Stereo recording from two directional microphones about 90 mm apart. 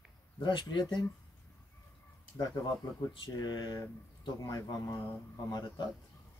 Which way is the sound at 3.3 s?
45° left (ahead or behind).